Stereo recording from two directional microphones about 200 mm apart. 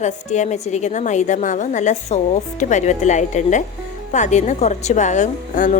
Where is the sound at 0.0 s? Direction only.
35° left (ahead or behind).